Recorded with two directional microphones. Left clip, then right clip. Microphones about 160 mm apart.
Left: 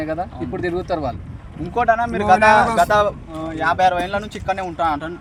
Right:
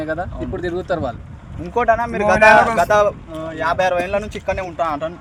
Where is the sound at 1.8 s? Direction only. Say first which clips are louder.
Even; 40° right (ahead or behind).